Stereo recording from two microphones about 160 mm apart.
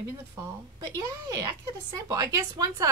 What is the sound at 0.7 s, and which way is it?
Speech, 20° right (ahead or behind).